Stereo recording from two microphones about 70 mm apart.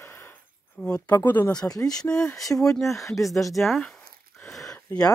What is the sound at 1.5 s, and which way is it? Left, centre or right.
Speech, left.